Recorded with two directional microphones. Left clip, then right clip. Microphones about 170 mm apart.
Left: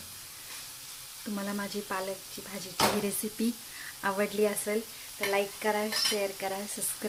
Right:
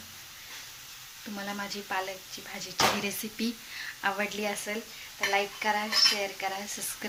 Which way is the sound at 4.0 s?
45° left (ahead or behind).